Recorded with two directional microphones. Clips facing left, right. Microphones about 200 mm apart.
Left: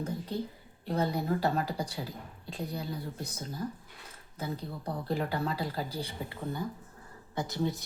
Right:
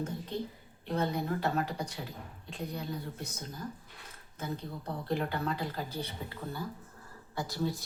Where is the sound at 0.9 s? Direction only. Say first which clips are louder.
Left 2 dB; 35° left (ahead or behind).